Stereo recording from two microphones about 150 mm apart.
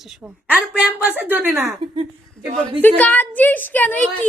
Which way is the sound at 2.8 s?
10° left (ahead or behind).